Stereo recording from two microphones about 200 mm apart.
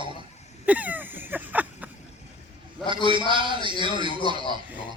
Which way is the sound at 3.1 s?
25° right (ahead or behind).